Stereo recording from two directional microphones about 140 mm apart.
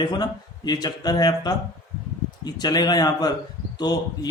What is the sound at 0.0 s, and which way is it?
A man's voice, 30° left (ahead or behind).